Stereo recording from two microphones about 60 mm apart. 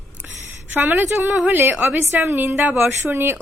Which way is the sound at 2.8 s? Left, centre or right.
Right.